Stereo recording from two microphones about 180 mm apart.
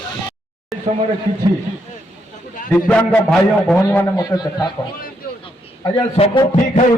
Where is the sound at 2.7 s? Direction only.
5° left (ahead or behind).